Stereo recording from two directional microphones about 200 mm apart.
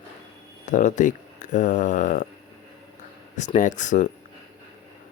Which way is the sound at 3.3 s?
35° left (ahead or behind).